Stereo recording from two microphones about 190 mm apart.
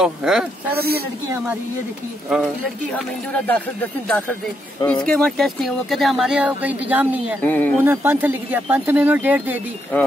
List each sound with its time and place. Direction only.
0.0 s speech: 5° right (ahead or behind)
0.7 s speech: 55° right (ahead or behind)
2.2 s speech: 5° right (ahead or behind)
3.4 s speech: 10° left (ahead or behind); by 7.3 s 10° right (ahead or behind)
7.4 s speech: 10° left (ahead or behind)
7.8 s speech: 10° right (ahead or behind)